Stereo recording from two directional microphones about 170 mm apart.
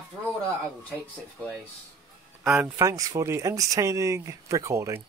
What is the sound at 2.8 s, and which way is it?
Speech, 20° right (ahead or behind).